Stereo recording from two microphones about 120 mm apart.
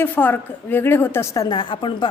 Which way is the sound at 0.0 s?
15° left (ahead or behind).